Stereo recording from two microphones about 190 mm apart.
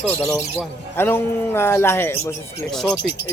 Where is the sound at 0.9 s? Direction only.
10° left (ahead or behind).